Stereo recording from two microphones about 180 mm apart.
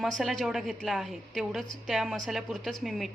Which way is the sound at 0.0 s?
Centre (ahead or behind).